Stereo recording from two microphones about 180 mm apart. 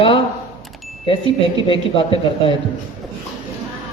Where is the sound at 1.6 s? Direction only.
30° left (ahead or behind).